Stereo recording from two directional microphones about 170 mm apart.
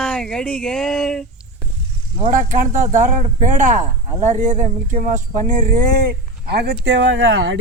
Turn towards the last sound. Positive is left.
turn(degrees=-90)